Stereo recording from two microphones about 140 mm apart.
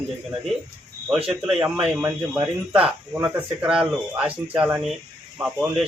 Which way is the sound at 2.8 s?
10° right (ahead or behind).